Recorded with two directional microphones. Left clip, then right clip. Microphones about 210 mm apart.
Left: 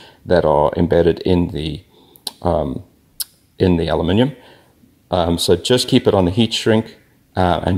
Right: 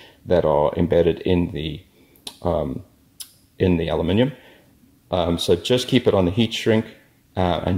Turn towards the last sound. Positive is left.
turn(degrees=25)  # may be behind; listen again after turning